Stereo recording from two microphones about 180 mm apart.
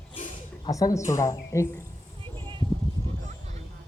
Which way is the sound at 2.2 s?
25° right (ahead or behind).